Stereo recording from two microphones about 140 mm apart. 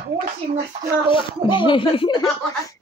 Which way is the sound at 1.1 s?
35° left (ahead or behind).